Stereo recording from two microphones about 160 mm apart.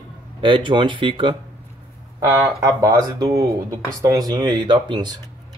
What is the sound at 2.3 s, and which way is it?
Speech, 15° right (ahead or behind).